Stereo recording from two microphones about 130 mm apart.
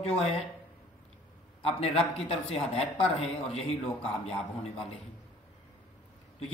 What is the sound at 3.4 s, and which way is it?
Speech, 50° left (ahead or behind).